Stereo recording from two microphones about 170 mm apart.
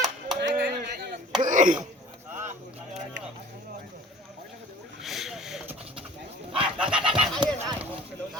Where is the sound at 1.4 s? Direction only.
50° right (ahead or behind).